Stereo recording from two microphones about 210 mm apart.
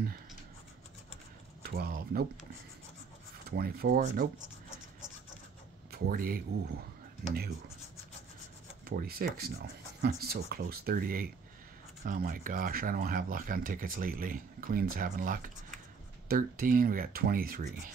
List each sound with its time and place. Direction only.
1.6 s a sound: 45° right (ahead or behind)
3.4 s speech: 45° right (ahead or behind)
5.9 s speech: 45° right (ahead or behind)
8.8 s speech: 45° right (ahead or behind)